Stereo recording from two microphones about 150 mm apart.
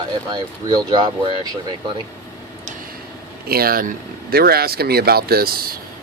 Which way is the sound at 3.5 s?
90° right.